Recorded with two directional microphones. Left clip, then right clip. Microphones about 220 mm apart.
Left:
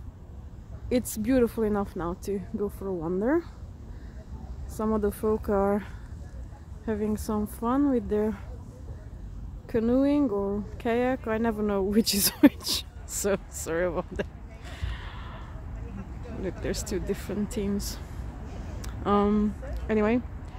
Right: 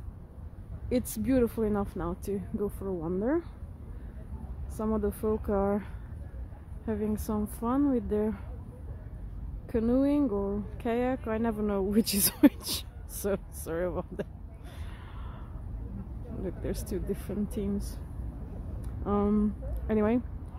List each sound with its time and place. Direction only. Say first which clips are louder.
0.8 s speech: left 3 dB; 5° left (ahead or behind)
4.7 s speech: left 4 dB; 10° left (ahead or behind)
6.9 s speech: left 3 dB; 5° left (ahead or behind)
9.7 s speech: left 3 dB; 5° left (ahead or behind)
14.7 s gasp: left 8 dB; 5° left (ahead or behind)
16.4 s speech: left 4 dB; 5° left (ahead or behind)
18.8 s a sound: left 6 dB; 10° left (ahead or behind)
19.9 s speech: left 3 dB; centre (ahead or behind)